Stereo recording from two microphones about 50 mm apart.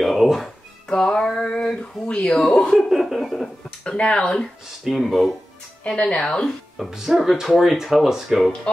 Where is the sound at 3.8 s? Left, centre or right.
Centre.